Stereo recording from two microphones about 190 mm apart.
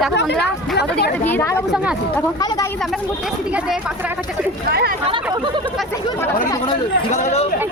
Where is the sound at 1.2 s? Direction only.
10° left (ahead or behind).